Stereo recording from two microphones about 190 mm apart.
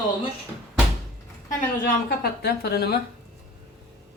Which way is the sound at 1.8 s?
55° left (ahead or behind).